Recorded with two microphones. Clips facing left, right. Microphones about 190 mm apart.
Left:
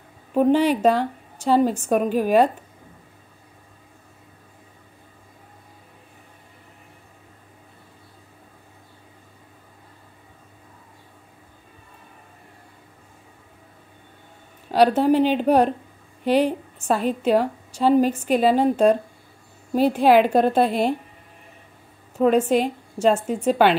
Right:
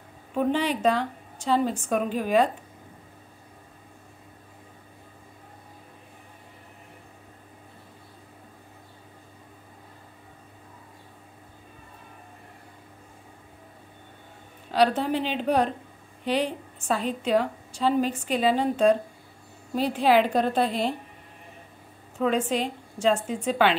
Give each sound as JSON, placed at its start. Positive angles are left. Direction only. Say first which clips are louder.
{"t": 0.4, "sound": "a woman's voice", "louder": "left 7 dB", "side_deg": 40}
{"t": 14.7, "sound": "a woman's voice", "louder": "left 6 dB", "side_deg": 40}
{"t": 22.2, "sound": "a woman's voice", "louder": "left 7 dB", "side_deg": 45}